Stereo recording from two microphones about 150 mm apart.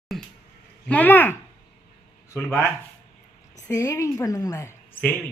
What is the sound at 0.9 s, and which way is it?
Speech, 10° left (ahead or behind).